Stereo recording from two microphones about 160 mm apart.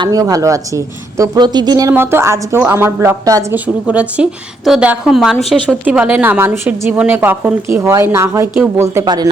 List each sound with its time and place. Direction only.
0.0 s speech: 20° right (ahead or behind)
1.9 s a woman's voice: 15° right (ahead or behind)
3.8 s a woman's voice: 5° right (ahead or behind); by 9.3 s 25° right (ahead or behind)